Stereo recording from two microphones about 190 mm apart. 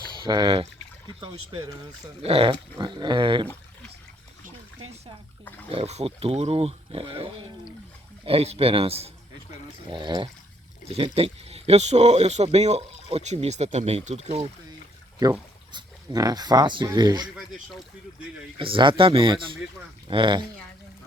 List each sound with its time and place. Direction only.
0.2 s dog: 25° right (ahead or behind)
5.6 s speech: 30° right (ahead or behind)
9.9 s dog: 25° right (ahead or behind)
10.8 s speech: 30° right (ahead or behind)
15.2 s speech: 20° right (ahead or behind)
17.3 s speech: centre (ahead or behind)
18.6 s dog: 25° right (ahead or behind)